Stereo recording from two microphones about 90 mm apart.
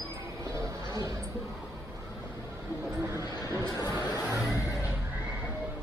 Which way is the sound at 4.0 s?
35° left (ahead or behind).